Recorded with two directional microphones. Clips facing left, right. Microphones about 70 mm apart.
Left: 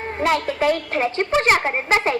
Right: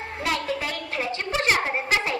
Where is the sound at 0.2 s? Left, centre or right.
Left.